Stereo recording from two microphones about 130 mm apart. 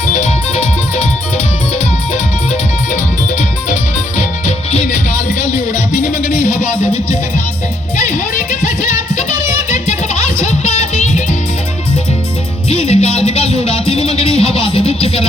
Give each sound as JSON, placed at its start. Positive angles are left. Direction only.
{"t": 0.0, "sound": "music", "side_deg": 65}
{"t": 2.1, "sound": "music", "side_deg": 65}
{"t": 7.9, "sound": "music", "side_deg": 65}
{"t": 12.6, "sound": "music", "side_deg": 50}